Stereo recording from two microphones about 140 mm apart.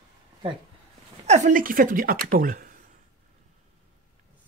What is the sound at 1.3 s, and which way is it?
A woman's voice, 65° right (ahead or behind).